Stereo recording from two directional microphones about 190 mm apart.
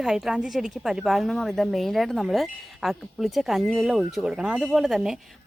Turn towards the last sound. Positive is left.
turn(degrees=0)  # may be behind; listen again after turning